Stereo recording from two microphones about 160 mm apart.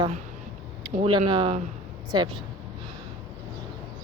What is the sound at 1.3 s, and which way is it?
A woman's voice, 30° right (ahead or behind).